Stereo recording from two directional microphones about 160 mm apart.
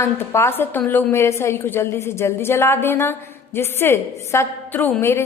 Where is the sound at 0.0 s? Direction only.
15° left (ahead or behind).